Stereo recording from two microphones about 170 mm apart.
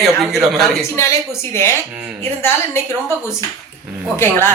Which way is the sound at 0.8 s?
15° left (ahead or behind).